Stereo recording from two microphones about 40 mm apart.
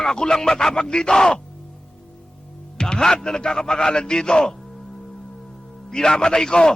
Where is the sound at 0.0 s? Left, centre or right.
Centre.